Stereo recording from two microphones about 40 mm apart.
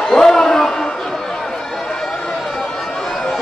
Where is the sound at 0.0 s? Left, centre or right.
Centre.